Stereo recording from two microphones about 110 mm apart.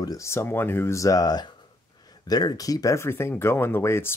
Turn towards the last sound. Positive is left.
turn(degrees=25)  # may be behind; listen again after turning